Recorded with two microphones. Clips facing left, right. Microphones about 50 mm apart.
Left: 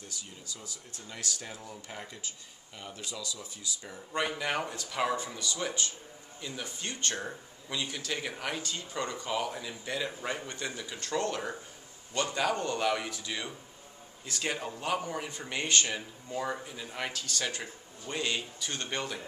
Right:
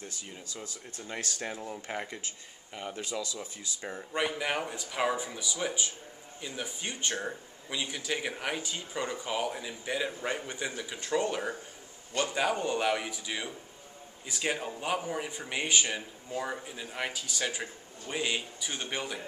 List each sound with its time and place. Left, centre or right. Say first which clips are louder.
0.5 s speech: right 3 dB; right
3.1 s speech: right 4 dB; right
4.1 s speech: even; centre